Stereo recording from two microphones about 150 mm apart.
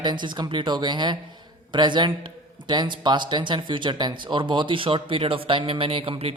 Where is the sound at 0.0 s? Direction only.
30° right (ahead or behind).